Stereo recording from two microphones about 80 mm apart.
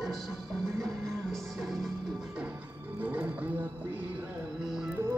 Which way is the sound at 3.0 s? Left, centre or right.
Right.